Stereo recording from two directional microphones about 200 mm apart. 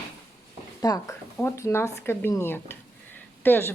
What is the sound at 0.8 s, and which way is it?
Speech, 20° left (ahead or behind).